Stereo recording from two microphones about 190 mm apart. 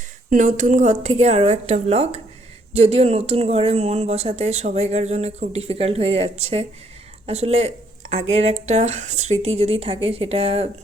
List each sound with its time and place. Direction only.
0.3 s speech: 40° right (ahead or behind)